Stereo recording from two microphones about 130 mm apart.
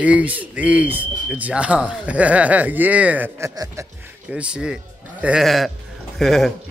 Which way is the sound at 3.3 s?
25° right (ahead or behind).